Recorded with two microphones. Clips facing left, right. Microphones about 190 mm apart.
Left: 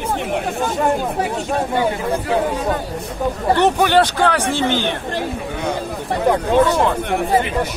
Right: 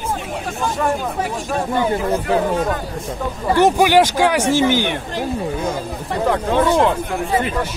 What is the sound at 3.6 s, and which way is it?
Speech, 10° right (ahead or behind).